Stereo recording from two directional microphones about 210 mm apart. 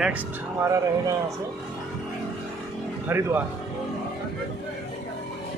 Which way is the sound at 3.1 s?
10° right (ahead or behind).